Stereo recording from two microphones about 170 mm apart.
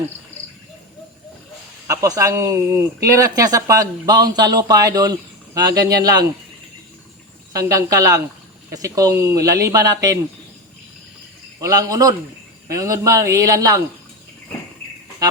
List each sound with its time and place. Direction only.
1.9 s speech: 20° right (ahead or behind)
7.5 s speech: 20° right (ahead or behind)
11.6 s speech: 20° right (ahead or behind)